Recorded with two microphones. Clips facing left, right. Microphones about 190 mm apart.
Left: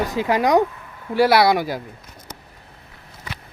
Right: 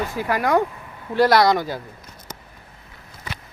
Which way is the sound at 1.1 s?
5° left (ahead or behind).